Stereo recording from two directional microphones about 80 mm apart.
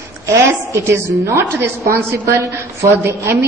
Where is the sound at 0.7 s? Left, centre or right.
Right.